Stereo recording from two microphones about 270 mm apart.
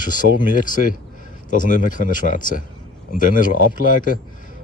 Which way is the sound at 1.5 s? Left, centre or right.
Left.